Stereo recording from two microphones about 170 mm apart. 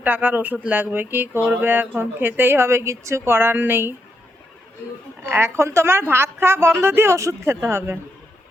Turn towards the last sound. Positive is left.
turn(degrees=-15)  # may be behind; listen again after turning